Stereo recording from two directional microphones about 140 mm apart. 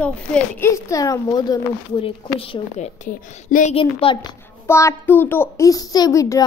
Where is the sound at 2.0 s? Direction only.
40° left (ahead or behind).